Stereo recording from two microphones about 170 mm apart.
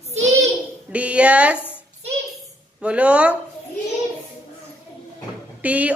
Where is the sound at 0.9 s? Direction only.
5° right (ahead or behind).